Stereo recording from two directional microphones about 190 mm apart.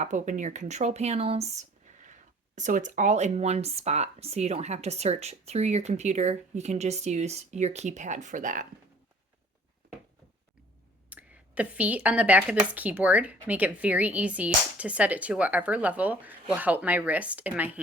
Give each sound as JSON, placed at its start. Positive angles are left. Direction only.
{"t": 0.0, "sound": "speech", "side_deg": -40}
{"t": 11.1, "sound": "a woman's voice", "side_deg": -10}